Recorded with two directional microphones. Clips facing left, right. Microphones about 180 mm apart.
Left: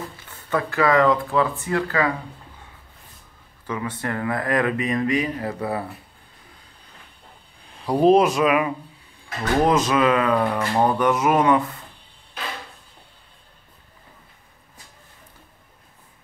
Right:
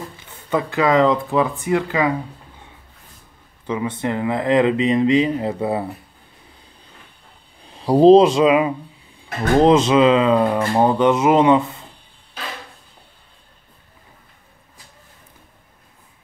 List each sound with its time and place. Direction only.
0.2 s speech: 20° right (ahead or behind)
3.6 s speech: 20° right (ahead or behind)
7.7 s speech: 30° right (ahead or behind)